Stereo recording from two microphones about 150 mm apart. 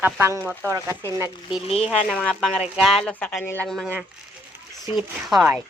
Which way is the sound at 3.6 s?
Centre (ahead or behind).